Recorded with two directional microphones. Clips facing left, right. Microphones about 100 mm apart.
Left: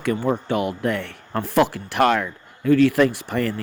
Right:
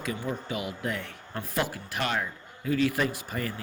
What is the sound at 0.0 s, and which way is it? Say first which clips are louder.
Speech: left 10 dB; 65° left (ahead or behind).